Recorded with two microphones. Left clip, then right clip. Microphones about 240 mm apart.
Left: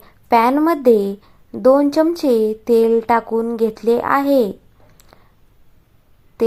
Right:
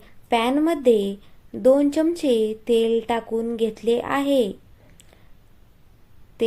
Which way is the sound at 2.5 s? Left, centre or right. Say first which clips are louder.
Left 6 dB; left.